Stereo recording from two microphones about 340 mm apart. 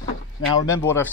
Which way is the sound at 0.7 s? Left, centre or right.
Centre.